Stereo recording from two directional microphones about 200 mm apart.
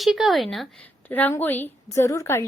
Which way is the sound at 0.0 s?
Centre (ahead or behind).